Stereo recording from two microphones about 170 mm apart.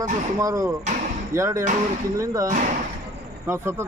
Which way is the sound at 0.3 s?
20° right (ahead or behind).